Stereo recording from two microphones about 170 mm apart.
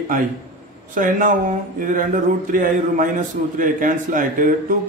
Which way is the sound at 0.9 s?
50° right (ahead or behind).